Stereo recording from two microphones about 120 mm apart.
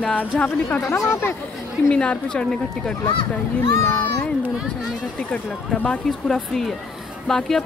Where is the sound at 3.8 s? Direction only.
20° left (ahead or behind).